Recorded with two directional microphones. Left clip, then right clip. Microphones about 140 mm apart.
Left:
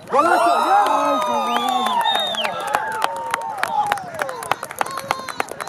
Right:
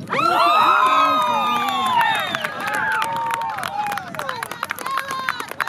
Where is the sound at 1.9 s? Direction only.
35° right (ahead or behind).